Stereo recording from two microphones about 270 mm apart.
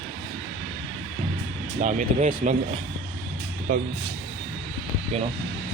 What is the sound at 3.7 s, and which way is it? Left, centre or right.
Speech, right.